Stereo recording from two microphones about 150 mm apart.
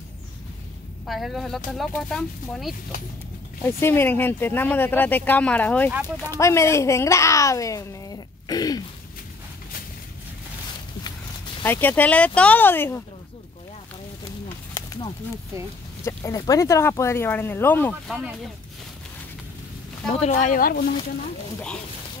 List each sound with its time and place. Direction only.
1.0 s speech: centre (ahead or behind)
3.6 s speech: 15° left (ahead or behind)
5.9 s speech: 15° right (ahead or behind)
6.3 s speech: 20° left (ahead or behind)
11.6 s speech: 15° left (ahead or behind)
14.7 s a sound: 25° left (ahead or behind)
16.0 s speech: 20° left (ahead or behind)
18.0 s speech: 5° right (ahead or behind)
20.2 s speech: 50° left (ahead or behind); by 20.8 s 70° left (ahead or behind)